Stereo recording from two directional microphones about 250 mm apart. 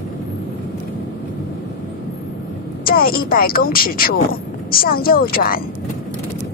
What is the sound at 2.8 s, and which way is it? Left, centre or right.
Speech, left.